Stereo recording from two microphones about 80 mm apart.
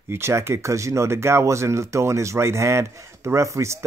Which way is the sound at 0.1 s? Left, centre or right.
Right.